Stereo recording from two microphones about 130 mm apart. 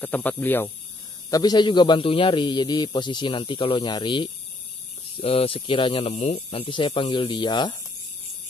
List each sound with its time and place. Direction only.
0.0 s speech: 15° left (ahead or behind)
1.3 s a man's voice: 30° left (ahead or behind)